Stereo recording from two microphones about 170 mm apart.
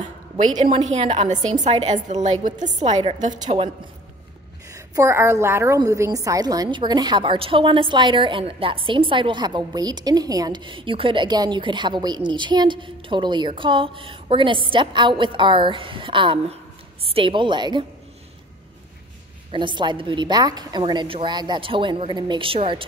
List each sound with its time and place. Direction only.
0.7 s a woman's voice: 35° right (ahead or behind)
3.3 s a woman's voice: 30° right (ahead or behind)
4.7 s a woman's voice: 15° right (ahead or behind)
19.5 s a woman's voice: 30° right (ahead or behind)